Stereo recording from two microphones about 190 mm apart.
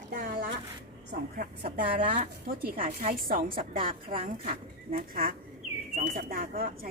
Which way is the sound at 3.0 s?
50° right (ahead or behind).